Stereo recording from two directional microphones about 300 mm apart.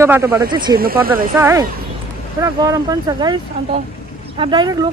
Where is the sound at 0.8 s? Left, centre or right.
Right.